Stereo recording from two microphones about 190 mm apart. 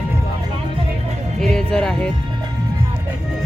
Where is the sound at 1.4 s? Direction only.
5° left (ahead or behind).